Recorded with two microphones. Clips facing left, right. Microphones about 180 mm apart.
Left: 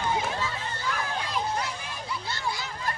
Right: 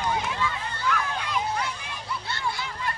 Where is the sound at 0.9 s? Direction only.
35° left (ahead or behind).